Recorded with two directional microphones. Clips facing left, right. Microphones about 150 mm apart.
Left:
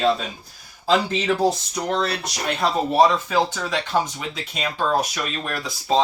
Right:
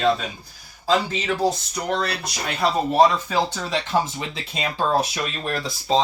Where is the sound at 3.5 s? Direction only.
Centre (ahead or behind).